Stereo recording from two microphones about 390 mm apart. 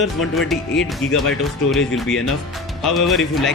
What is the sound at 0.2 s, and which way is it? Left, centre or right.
Speech, centre.